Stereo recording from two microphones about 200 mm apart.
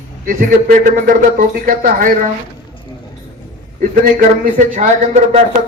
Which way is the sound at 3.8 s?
40° right (ahead or behind).